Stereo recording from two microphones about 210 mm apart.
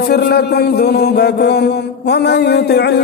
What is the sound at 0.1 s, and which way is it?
A man's voice, 50° left (ahead or behind).